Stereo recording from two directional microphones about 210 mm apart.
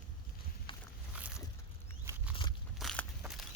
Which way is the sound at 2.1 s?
10° right (ahead or behind).